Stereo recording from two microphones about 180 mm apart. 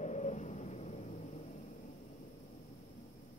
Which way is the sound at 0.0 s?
40° left (ahead or behind).